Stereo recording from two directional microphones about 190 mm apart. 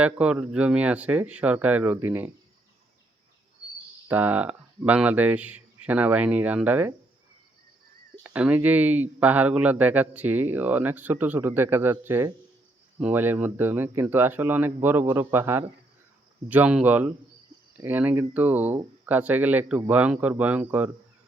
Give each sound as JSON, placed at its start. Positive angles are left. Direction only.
{"t": 0.0, "sound": "speech", "side_deg": -5}
{"t": 4.1, "sound": "speech", "side_deg": -10}
{"t": 8.2, "sound": "speech", "side_deg": -5}